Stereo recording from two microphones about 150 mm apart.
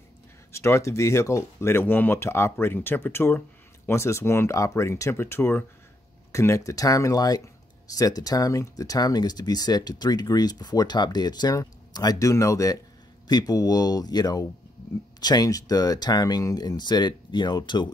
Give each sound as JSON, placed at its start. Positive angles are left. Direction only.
{"t": 0.5, "sound": "speech", "side_deg": 20}